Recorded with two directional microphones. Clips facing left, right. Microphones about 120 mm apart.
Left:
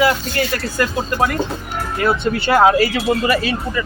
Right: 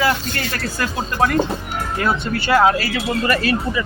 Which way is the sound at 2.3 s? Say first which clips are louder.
Left 2 dB; 20° left (ahead or behind).